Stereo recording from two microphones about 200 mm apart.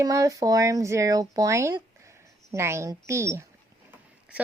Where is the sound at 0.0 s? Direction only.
15° right (ahead or behind).